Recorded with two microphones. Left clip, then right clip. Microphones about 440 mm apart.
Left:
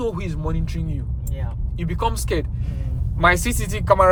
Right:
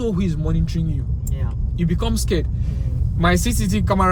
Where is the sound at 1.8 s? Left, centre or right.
Centre.